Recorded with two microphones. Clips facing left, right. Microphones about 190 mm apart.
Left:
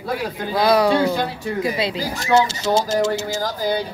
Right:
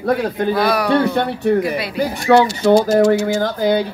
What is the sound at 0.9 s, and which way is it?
A man's voice, 65° right (ahead or behind).